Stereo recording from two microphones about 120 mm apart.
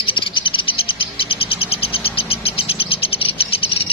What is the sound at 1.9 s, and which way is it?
Bird, 50° left (ahead or behind).